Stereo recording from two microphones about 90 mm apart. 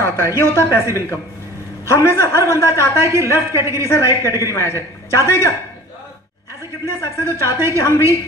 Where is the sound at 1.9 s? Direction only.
30° left (ahead or behind).